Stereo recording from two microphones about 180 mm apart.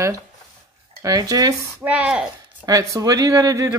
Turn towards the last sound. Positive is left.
turn(degrees=-20)  # may be behind; listen again after turning